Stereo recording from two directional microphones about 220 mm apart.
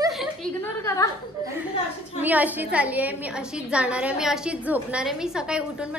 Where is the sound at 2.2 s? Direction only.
5° right (ahead or behind).